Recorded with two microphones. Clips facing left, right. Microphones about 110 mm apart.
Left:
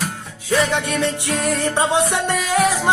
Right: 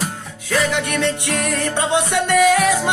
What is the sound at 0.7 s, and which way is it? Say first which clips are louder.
Music: even; 30° left (ahead or behind).